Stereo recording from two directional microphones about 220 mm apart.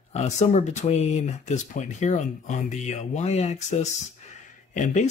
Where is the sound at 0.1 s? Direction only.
30° left (ahead or behind).